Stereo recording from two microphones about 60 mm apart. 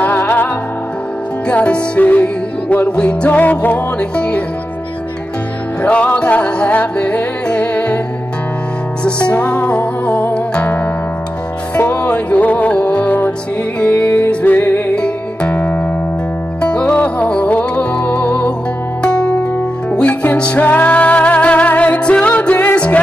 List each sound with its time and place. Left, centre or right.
0.0 s music: left
1.5 s music: left
5.8 s music: left
9.0 s music: centre
11.8 s music: left